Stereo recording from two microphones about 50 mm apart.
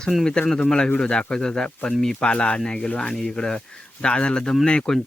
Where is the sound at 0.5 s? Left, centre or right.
Centre.